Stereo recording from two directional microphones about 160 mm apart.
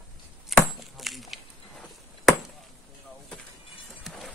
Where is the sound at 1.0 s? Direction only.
Centre (ahead or behind).